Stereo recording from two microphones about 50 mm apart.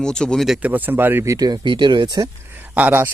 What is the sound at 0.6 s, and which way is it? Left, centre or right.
Speech, right.